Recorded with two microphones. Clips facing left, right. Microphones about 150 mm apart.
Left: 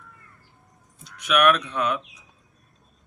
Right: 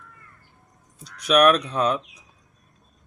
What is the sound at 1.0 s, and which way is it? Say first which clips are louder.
Speech: right 3 dB; 35° right (ahead or behind).